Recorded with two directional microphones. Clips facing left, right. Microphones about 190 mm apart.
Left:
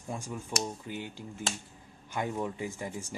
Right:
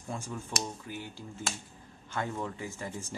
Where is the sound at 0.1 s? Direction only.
15° left (ahead or behind).